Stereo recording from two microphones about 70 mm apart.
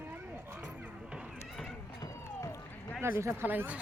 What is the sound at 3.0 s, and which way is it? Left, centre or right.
Speech, right.